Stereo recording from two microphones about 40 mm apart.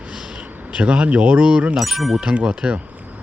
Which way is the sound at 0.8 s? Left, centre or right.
Right.